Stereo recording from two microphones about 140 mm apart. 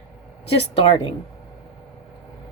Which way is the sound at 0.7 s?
40° left (ahead or behind).